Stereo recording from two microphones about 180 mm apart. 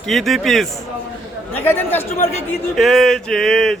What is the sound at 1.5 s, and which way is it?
Speech, 10° left (ahead or behind).